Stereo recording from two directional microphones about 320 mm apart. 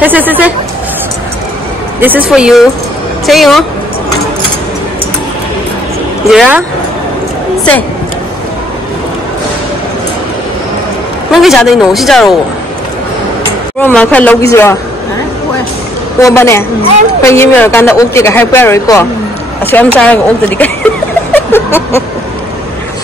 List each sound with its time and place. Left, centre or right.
0.0 s a woman's voice: centre
2.0 s a woman's voice: centre
6.3 s a woman's voice: centre
11.3 s a woman's voice: centre
13.7 s a woman's voice: centre
16.2 s a woman's voice: centre
21.3 s chuckle: centre